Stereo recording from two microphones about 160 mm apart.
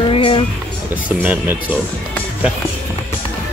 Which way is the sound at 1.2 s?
10° right (ahead or behind).